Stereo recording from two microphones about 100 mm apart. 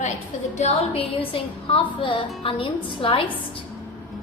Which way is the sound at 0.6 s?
85° left.